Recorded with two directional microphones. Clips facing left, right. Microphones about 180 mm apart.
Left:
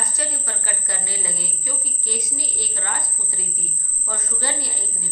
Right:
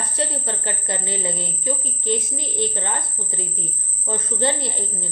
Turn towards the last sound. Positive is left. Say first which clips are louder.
# right 5 dB
turn(degrees=-25)  # may be behind; listen again after turning